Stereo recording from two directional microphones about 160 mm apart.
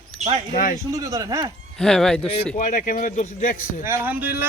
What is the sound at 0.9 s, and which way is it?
Speech, 20° right (ahead or behind).